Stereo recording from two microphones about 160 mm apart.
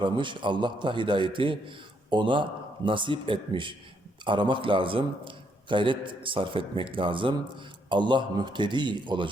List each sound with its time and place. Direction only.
0.0 s a man's voice: 30° right (ahead or behind)